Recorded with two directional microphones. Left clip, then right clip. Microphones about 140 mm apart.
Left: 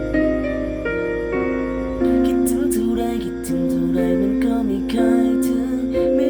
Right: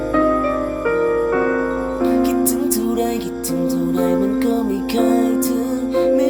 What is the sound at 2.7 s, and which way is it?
Music, 15° left (ahead or behind).